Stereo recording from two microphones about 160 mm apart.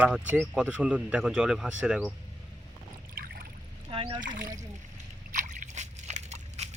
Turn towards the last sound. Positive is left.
turn(degrees=-45)  # may be behind; listen again after turning